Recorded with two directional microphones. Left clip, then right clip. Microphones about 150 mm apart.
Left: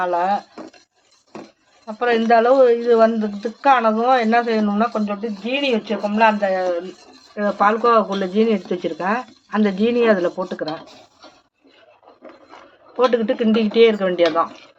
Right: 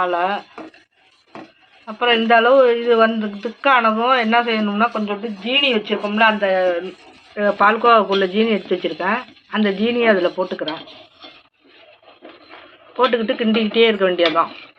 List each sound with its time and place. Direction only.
0.0 s a man's voice: 65° left (ahead or behind)
2.0 s a man's voice: 65° left (ahead or behind)
6.5 s speech: 45° left (ahead or behind)
13.1 s speech: 45° left (ahead or behind)